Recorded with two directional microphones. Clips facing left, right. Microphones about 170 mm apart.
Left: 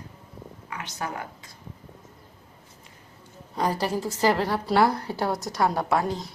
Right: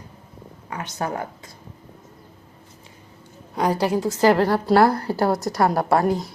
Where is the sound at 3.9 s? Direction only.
20° right (ahead or behind).